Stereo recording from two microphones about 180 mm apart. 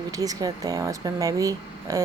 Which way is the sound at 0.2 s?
20° right (ahead or behind).